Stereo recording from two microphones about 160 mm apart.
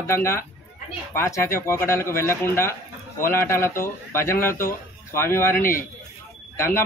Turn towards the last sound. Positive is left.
turn(degrees=15)  # may be behind; listen again after turning